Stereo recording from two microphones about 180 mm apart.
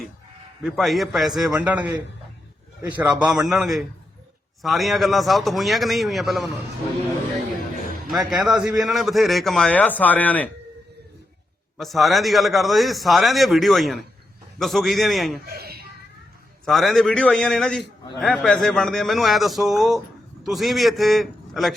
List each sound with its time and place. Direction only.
0.6 s a man's voice: centre (ahead or behind)
8.3 s a man's voice: centre (ahead or behind)
11.8 s a man's voice: centre (ahead or behind)
15.4 s a sound: 60° right (ahead or behind)
16.6 s a man's voice: centre (ahead or behind)